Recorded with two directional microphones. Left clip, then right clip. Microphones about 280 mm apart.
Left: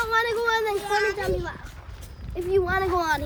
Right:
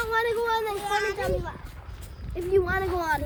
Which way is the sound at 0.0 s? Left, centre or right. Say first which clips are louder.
Left 2 dB; left.